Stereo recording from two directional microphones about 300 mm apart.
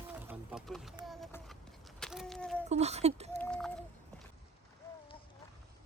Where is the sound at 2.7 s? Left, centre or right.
Right.